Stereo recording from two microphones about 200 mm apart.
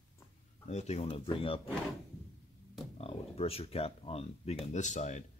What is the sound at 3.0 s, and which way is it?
Speech, 30° left (ahead or behind).